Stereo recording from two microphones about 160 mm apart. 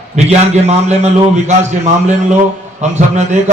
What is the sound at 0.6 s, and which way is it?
A man's voice, 45° right (ahead or behind).